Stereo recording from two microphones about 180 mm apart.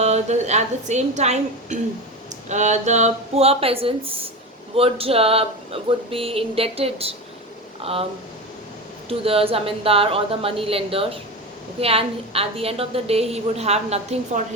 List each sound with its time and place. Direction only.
0.0 s a woman's voice: 40° right (ahead or behind)
9.0 s a woman's voice: 30° right (ahead or behind)